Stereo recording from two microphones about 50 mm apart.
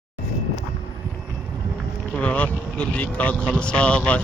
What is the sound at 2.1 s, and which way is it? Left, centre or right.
Boat, left.